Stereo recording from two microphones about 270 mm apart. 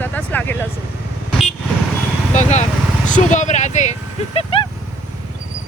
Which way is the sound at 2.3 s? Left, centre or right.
Left.